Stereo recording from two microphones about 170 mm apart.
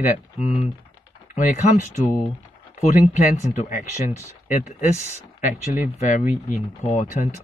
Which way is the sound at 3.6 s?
45° left (ahead or behind).